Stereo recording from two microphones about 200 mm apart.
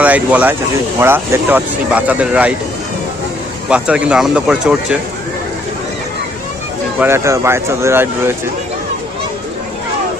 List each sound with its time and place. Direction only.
0.0 s speech: 5° right (ahead or behind)
3.7 s speech: 5° right (ahead or behind)
7.0 s speech: 10° right (ahead or behind)